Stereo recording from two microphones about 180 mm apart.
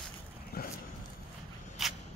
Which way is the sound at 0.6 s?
60° left (ahead or behind).